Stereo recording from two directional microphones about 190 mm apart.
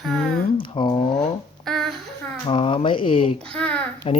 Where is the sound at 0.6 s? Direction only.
25° left (ahead or behind).